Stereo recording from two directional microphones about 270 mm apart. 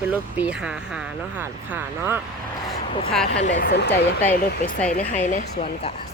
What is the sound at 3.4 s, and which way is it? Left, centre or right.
Speech, left.